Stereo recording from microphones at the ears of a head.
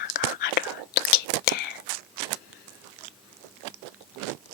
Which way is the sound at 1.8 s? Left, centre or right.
Right.